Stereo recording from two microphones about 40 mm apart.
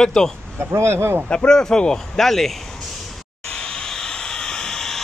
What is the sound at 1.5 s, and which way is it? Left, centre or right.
Speech, centre.